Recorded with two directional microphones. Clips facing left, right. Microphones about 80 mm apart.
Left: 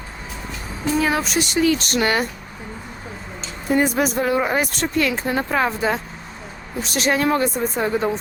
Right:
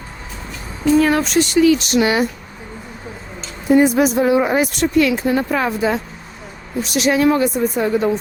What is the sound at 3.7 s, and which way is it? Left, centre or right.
Speech, right.